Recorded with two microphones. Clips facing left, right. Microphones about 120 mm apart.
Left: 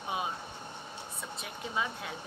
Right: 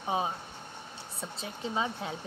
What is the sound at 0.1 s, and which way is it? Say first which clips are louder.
Speech: right 4 dB; 30° right (ahead or behind).